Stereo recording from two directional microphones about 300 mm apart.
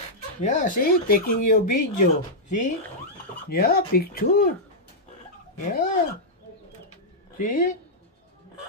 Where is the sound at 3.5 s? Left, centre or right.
Left.